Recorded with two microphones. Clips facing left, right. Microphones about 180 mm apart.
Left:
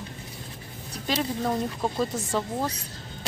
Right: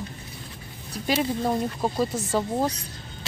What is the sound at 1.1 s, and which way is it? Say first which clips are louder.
Speech: right 3 dB; 10° right (ahead or behind).